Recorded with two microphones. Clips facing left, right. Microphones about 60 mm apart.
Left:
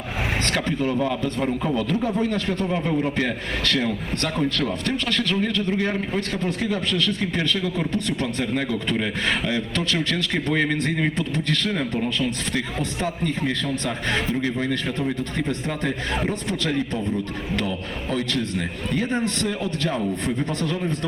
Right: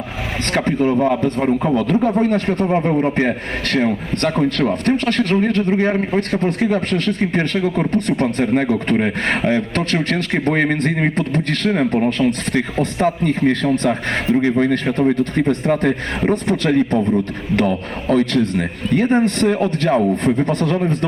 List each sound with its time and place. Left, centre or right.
0.5 s a man's voice: right